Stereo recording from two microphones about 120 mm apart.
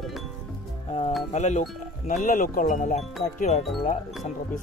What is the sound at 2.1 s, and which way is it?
Speech, 90° left.